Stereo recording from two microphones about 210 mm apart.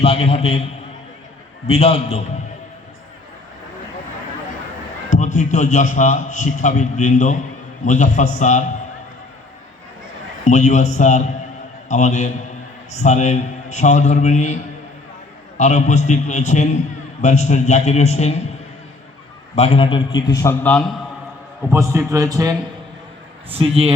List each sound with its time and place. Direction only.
0.0 s a man's voice: 30° left (ahead or behind)
1.6 s a man's voice: 30° left (ahead or behind)
5.0 s a man's voice: 35° left (ahead or behind)
10.4 s a man's voice: 35° left (ahead or behind)
19.5 s a man's voice: 25° left (ahead or behind); by 20.8 s 10° left (ahead or behind)
21.7 s a man's voice: 15° right (ahead or behind)
23.5 s a man's voice: 30° right (ahead or behind)